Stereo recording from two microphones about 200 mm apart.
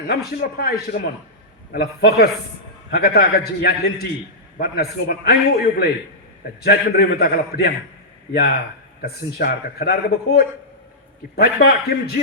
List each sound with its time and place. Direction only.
0.1 s a man's voice: 55° left (ahead or behind)
9.0 s a man's voice: 50° left (ahead or behind)